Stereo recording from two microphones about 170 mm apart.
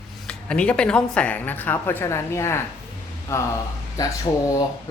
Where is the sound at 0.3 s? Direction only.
5° left (ahead or behind).